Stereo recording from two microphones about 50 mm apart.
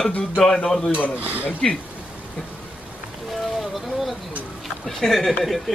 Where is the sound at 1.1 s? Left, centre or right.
Right.